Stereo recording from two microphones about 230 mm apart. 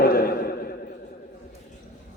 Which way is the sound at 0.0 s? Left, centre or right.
Left.